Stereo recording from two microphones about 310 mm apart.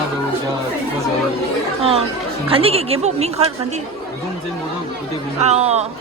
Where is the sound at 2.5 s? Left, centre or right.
Centre.